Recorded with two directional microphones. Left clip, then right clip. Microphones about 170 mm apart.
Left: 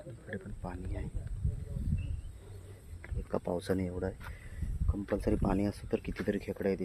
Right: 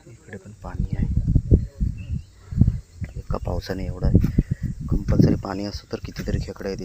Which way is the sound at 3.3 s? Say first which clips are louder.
Right 4 dB; 10° left (ahead or behind).